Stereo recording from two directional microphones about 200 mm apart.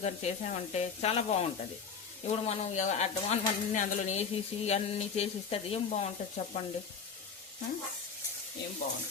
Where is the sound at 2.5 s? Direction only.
40° left (ahead or behind).